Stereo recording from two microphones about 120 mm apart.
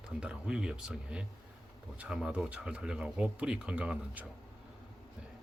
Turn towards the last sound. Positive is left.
turn(degrees=-10)  # may be behind; listen again after turning